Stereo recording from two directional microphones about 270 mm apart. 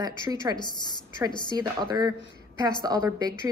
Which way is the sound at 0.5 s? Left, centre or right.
Centre.